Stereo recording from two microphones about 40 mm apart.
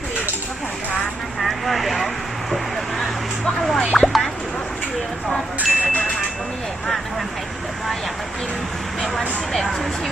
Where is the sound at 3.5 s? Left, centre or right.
Centre.